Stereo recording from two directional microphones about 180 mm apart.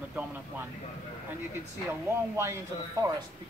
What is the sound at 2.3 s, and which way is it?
Speech, 15° right (ahead or behind).